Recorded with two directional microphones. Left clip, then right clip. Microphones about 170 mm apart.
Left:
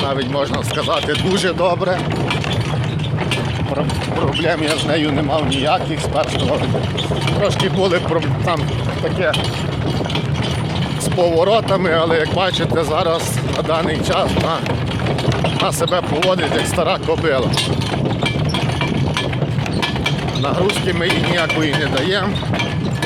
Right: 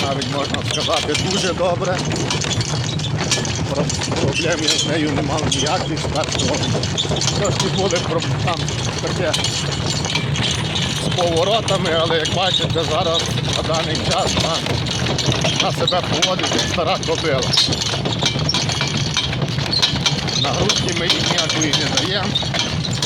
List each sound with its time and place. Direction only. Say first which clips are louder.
1.4 s speech: left 2 dB; 60° left (ahead or behind)
5.6 s speech: left 3 dB; 70° left (ahead or behind)
11.3 s speech: left 3 dB; 90° left
16.8 s speech: left 2 dB; 90° left